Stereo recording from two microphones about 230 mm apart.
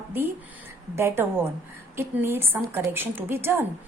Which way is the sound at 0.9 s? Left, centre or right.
Centre.